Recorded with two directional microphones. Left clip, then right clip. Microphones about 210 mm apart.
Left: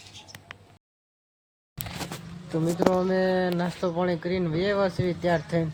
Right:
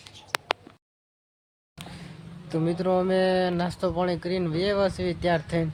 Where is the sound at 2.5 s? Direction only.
5° right (ahead or behind).